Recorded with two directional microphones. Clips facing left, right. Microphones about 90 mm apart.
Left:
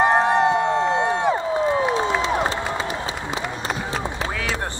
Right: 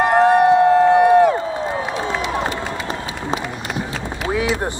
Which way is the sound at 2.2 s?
30° left (ahead or behind).